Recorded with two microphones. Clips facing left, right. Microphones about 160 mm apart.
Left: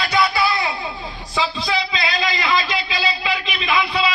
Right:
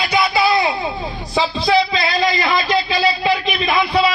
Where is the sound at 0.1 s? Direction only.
20° right (ahead or behind).